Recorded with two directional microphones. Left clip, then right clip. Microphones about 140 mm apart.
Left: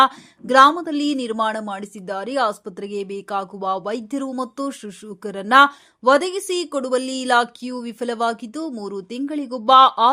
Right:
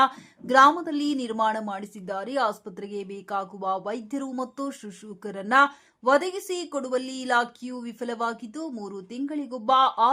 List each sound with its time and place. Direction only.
0.0 s speech: 20° left (ahead or behind)